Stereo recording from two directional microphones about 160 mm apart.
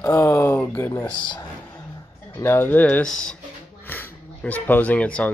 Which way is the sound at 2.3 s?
15° left (ahead or behind).